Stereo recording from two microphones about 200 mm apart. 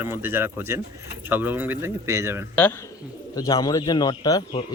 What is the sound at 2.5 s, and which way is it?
Speech, 10° left (ahead or behind).